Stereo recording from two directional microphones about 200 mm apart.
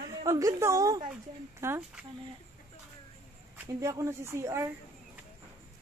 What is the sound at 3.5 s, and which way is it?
Speech, 10° right (ahead or behind).